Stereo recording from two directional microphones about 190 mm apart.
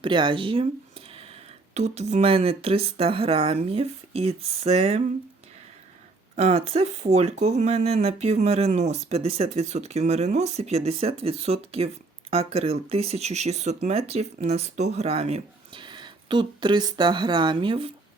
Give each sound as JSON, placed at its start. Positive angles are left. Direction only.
{"t": 0.0, "sound": "speech", "side_deg": -25}
{"t": 6.3, "sound": "speech", "side_deg": -35}